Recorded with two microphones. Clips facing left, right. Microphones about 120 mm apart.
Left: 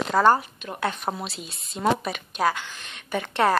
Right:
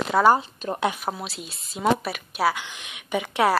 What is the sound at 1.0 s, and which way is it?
A woman's voice, centre (ahead or behind).